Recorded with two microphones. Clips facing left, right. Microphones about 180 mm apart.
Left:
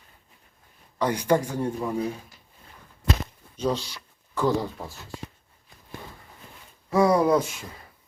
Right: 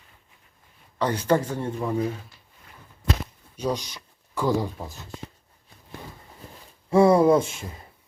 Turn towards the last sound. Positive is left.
turn(degrees=-25)  # may be behind; listen again after turning